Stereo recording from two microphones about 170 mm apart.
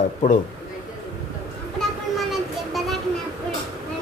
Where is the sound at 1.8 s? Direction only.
Centre (ahead or behind).